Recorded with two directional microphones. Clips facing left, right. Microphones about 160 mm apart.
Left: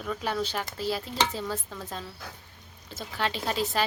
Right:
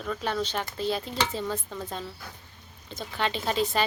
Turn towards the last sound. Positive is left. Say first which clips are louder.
# right 2 dB
turn(degrees=0)  # may be behind; listen again after turning